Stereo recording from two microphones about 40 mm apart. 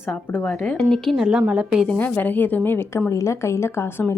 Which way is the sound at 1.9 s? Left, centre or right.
Left.